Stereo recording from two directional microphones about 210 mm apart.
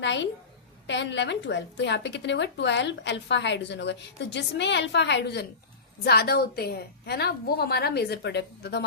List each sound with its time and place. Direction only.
0.0 s a woman's voice: 60° left (ahead or behind)